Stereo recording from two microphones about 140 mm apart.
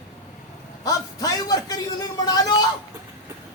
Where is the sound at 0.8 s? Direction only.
25° left (ahead or behind).